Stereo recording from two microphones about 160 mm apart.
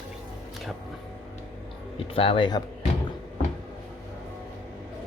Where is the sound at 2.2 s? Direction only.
35° left (ahead or behind).